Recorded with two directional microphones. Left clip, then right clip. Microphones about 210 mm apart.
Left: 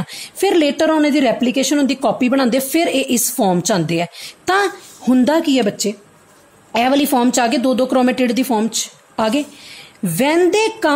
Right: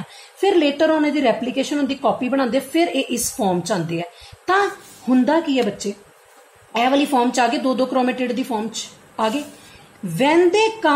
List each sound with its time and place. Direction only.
0.4 s a woman's voice: 55° left (ahead or behind)